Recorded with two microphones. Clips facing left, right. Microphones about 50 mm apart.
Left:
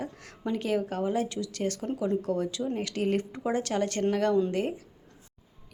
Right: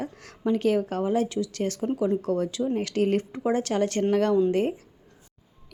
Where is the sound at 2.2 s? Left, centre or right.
Right.